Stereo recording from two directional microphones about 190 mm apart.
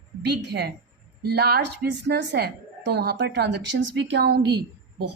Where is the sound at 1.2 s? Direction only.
55° right (ahead or behind).